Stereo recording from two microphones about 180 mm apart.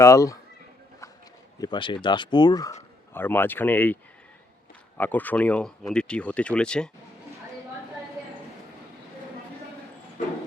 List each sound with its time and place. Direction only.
0.0 s speech: 15° left (ahead or behind)
1.5 s speech: 25° left (ahead or behind)
4.9 s speech: 10° left (ahead or behind)